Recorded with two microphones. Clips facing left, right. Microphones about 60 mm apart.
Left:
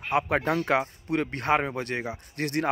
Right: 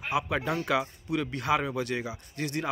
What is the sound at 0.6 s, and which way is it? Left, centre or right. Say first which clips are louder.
Speech: left 3 dB; left.